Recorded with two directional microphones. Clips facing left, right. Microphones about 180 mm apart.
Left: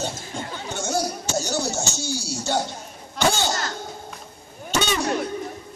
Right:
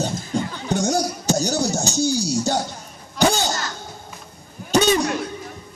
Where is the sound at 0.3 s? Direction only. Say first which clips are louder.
Right 8 dB; 35° right (ahead or behind).